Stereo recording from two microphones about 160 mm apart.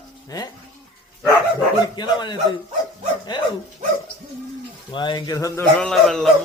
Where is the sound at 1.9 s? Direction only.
25° left (ahead or behind).